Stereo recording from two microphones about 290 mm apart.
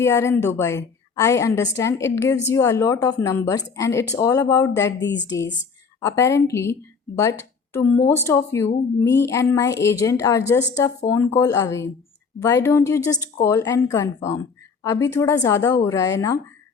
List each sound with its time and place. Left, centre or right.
0.0 s speech: centre
4.9 s a woman's voice: left
6.0 s speech: centre